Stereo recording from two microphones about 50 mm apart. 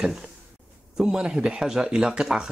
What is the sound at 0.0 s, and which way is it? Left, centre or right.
Speech, centre.